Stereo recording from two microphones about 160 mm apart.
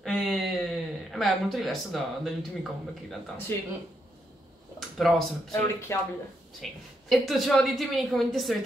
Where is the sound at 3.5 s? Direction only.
15° left (ahead or behind).